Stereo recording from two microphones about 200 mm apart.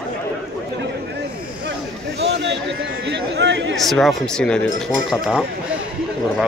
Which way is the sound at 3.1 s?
60° right (ahead or behind).